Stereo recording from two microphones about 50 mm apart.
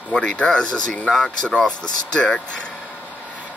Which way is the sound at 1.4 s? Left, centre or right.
Centre.